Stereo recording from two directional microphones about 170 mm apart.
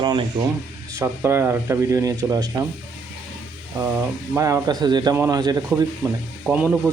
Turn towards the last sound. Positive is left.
turn(degrees=-10)  # may be behind; listen again after turning